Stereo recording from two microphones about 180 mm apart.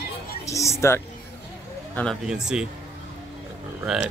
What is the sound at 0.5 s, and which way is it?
Speech, 15° left (ahead or behind).